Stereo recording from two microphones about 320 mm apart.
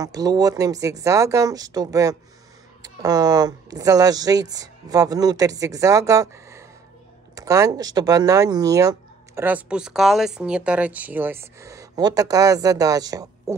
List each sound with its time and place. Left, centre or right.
0.0 s speech: centre